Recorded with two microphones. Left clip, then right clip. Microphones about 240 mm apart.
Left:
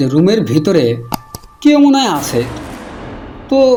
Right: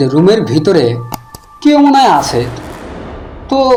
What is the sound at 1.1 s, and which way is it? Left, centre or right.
Music, centre.